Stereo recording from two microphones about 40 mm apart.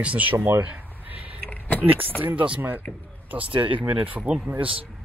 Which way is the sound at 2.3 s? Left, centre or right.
Right.